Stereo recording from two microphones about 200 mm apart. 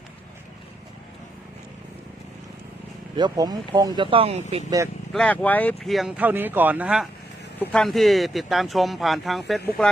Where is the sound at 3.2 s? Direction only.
20° right (ahead or behind).